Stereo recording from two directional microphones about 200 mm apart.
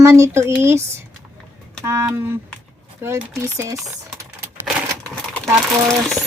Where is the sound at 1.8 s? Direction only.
15° right (ahead or behind).